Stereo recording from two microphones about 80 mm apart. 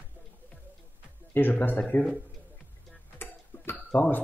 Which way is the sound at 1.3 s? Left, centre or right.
Left.